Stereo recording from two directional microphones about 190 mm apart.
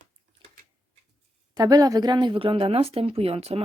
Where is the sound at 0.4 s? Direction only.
25° right (ahead or behind).